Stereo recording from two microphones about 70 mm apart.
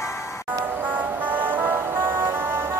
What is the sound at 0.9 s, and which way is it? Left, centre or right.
Music, right.